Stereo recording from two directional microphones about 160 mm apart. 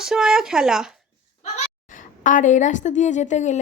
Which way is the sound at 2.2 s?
50° left (ahead or behind).